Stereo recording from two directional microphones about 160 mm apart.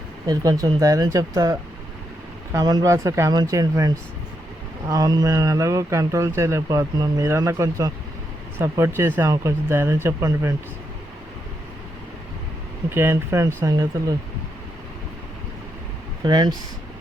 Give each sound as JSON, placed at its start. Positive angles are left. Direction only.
{"t": 0.3, "sound": "speech", "side_deg": -25}
{"t": 12.9, "sound": "speech", "side_deg": -15}
{"t": 16.2, "sound": "speech", "side_deg": -25}